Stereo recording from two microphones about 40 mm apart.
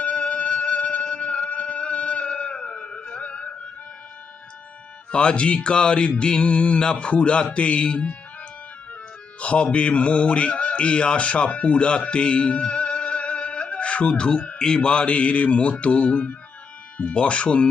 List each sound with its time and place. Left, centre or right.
0.0 s music: left
5.1 s speech: left
9.4 s speech: left